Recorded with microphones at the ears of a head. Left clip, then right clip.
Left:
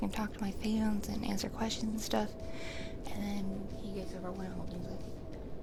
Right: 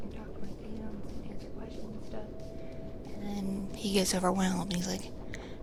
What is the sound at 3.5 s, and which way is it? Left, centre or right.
A woman's voice, right.